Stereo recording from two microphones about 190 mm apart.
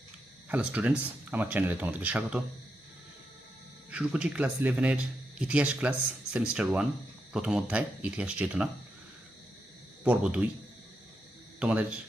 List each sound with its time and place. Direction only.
0.4 s speech: 10° right (ahead or behind)
3.9 s speech: 5° right (ahead or behind)
10.0 s speech: 5° right (ahead or behind)
11.6 s speech: 5° right (ahead or behind)